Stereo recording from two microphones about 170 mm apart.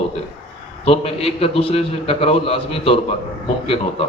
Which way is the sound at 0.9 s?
35° left (ahead or behind).